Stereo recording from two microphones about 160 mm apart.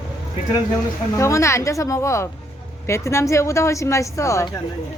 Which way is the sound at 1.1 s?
20° left (ahead or behind).